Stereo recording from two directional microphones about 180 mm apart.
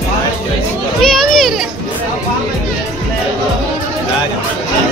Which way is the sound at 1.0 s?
Centre (ahead or behind).